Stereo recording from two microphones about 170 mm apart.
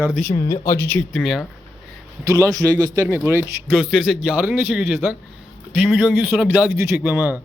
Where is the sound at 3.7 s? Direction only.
5° right (ahead or behind).